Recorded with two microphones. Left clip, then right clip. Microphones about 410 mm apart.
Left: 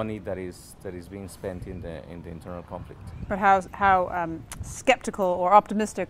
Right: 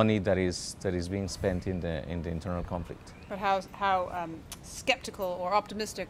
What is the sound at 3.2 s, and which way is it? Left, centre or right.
A woman's voice, left.